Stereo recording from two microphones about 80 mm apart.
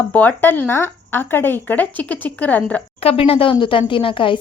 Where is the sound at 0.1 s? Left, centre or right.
Left.